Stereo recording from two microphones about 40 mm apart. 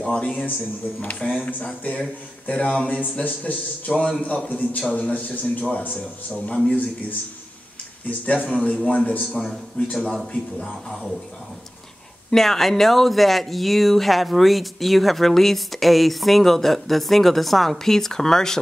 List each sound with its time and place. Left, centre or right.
0.0 s a man's voice: left
2.9 s a man's voice: left
8.3 s a man's voice: left
9.0 s a man's voice: left
9.4 s speech: centre
10.0 s a man's voice: centre
12.3 s speech: centre